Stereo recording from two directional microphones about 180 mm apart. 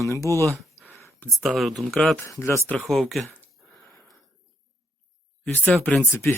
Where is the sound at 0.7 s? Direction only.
15° right (ahead or behind).